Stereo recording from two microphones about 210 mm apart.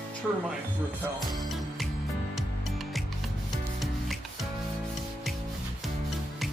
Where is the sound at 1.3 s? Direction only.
Centre (ahead or behind).